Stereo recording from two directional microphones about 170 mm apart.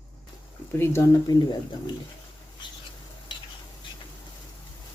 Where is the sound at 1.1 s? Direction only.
25° left (ahead or behind).